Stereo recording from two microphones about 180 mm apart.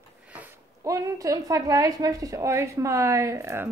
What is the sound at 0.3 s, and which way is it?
A woman's voice, 10° right (ahead or behind).